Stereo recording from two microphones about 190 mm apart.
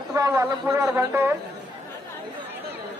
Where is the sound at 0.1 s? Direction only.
15° right (ahead or behind).